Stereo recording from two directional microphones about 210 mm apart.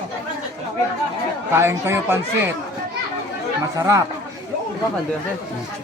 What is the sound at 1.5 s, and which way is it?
Speech, 10° right (ahead or behind).